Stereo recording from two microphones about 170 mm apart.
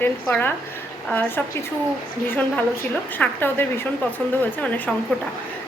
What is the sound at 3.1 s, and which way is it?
A woman's voice, 10° left (ahead or behind).